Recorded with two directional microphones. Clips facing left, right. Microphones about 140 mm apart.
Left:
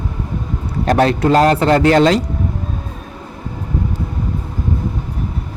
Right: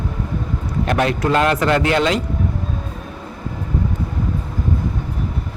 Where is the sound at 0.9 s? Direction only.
35° left (ahead or behind).